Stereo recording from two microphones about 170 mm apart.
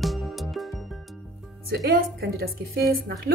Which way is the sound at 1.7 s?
70° right (ahead or behind).